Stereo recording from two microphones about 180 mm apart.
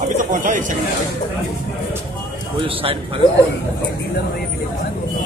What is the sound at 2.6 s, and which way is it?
Speech, 30° right (ahead or behind).